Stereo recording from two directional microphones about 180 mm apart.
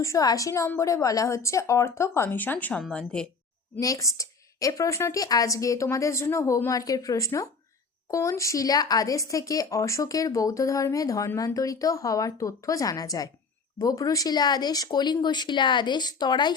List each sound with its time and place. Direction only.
0.0 s a woman's voice: 20° left (ahead or behind)
3.8 s a woman's voice: 20° left (ahead or behind)